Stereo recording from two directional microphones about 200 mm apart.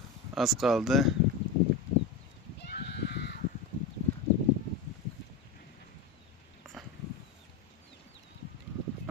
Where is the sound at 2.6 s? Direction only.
55° left (ahead or behind).